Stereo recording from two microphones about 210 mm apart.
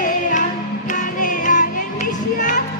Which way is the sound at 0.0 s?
40° left (ahead or behind).